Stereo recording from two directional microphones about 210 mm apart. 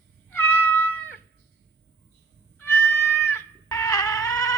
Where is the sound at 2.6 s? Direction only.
10° left (ahead or behind).